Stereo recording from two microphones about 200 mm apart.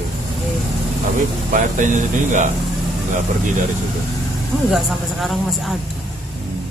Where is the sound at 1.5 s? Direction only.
40° right (ahead or behind).